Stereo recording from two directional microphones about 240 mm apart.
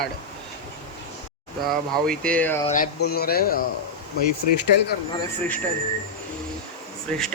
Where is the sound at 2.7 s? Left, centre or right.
Left.